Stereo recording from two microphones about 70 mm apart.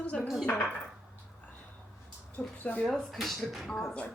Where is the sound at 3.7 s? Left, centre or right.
Centre.